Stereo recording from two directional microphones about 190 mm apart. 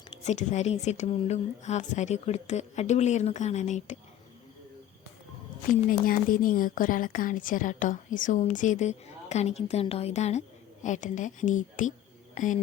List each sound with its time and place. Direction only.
0.3 s a woman's voice: 35° left (ahead or behind)
5.9 s a woman's voice: 45° left (ahead or behind)